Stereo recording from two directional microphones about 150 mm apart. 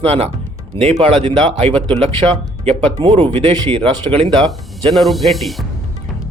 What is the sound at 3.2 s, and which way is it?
Speech, 35° right (ahead or behind).